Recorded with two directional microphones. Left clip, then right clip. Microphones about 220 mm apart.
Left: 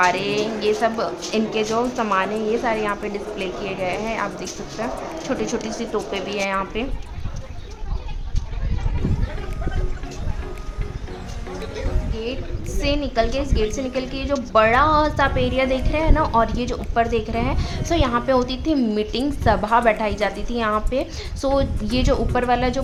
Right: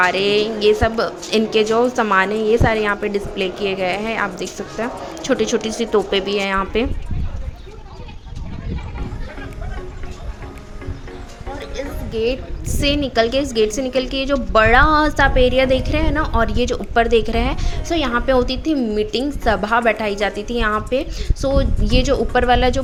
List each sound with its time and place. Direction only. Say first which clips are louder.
0.0 s a woman's voice: right 3 dB; 15° right (ahead or behind)
12.8 s a woman's voice: right 4 dB; 15° right (ahead or behind)
17.7 s a woman's voice: right 1 dB; centre (ahead or behind)